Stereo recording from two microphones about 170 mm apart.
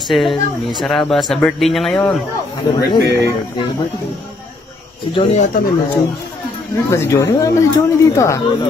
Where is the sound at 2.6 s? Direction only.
25° left (ahead or behind).